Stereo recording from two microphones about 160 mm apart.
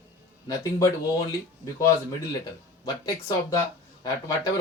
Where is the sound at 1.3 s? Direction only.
20° left (ahead or behind).